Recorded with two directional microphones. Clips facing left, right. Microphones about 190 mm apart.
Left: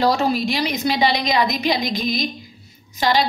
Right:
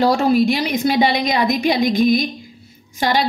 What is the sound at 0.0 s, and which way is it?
A woman's voice, 50° right (ahead or behind).